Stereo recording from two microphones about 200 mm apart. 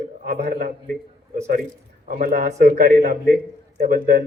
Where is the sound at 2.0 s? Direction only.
45° right (ahead or behind).